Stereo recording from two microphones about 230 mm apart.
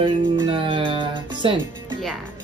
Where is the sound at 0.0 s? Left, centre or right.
Right.